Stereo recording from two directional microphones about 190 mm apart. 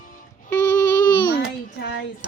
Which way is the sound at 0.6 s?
20° left (ahead or behind).